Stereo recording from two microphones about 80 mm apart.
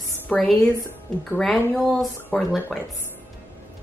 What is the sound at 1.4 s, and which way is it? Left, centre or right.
A woman's voice, centre.